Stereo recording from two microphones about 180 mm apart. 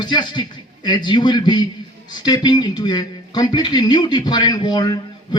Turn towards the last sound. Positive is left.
turn(degrees=25)  # may be behind; listen again after turning